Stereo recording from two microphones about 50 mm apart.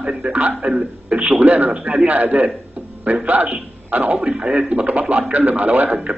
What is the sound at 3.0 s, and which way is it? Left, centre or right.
A man's voice, right.